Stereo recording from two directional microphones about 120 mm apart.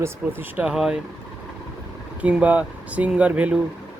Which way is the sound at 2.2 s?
10° right (ahead or behind).